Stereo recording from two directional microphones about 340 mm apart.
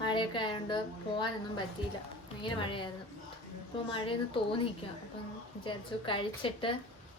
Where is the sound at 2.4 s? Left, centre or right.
Centre.